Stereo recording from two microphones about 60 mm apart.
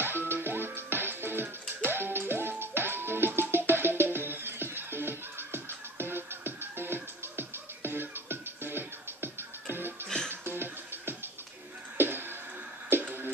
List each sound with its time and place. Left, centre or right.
0.0 s music: right
10.0 s music: centre
10.4 s music: right